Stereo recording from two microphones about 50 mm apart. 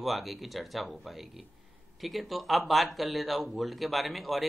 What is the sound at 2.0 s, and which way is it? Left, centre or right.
A man's voice, centre.